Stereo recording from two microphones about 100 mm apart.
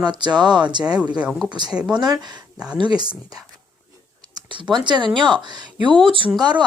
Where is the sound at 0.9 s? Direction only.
10° right (ahead or behind).